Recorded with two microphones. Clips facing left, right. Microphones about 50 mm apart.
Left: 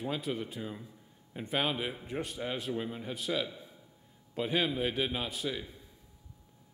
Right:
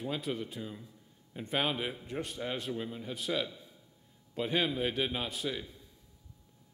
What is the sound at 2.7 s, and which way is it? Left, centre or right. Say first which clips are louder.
Speech: left 2 dB; left.